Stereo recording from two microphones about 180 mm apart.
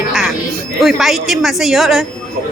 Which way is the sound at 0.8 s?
Centre (ahead or behind).